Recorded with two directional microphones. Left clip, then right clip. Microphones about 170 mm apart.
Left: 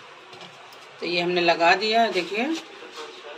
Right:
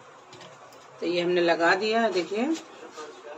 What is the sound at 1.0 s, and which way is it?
Speech, 20° right (ahead or behind).